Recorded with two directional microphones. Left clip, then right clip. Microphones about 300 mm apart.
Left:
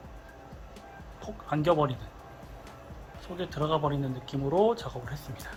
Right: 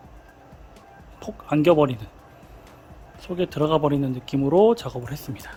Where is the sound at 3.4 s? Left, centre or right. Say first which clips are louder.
Right 8 dB; right.